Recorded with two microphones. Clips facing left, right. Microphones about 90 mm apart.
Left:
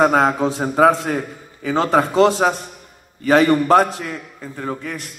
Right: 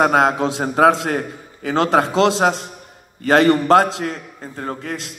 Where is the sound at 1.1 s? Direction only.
55° right (ahead or behind).